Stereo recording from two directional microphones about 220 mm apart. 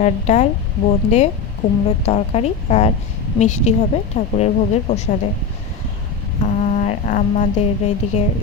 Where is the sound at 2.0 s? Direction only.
30° left (ahead or behind).